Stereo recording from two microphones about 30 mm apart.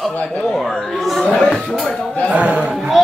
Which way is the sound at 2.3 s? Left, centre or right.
Right.